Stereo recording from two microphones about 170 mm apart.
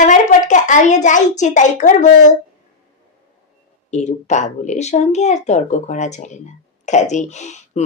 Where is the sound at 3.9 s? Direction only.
45° left (ahead or behind).